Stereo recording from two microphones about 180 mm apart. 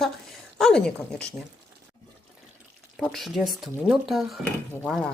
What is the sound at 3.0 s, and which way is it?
Speech, centre (ahead or behind).